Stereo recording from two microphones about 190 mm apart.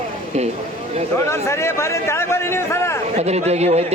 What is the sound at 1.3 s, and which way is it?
A man's voice, 15° left (ahead or behind).